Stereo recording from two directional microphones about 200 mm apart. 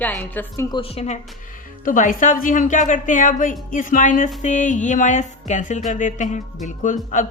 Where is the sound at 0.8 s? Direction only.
30° left (ahead or behind).